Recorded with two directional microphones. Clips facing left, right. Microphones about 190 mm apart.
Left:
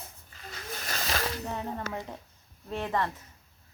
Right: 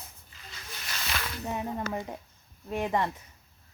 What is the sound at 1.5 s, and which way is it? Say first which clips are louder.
Speech: right 2 dB; 15° right (ahead or behind).